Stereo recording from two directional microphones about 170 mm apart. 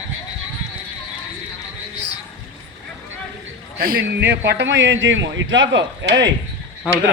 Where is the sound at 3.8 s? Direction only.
60° right (ahead or behind); by 6.2 s 90° right.